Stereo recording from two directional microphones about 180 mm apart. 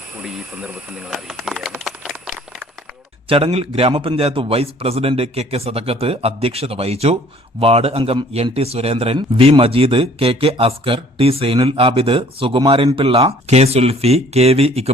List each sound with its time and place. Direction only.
0.2 s speech: 5° right (ahead or behind)
1.8 s a sound: centre (ahead or behind)
3.2 s a man's voice: 30° right (ahead or behind)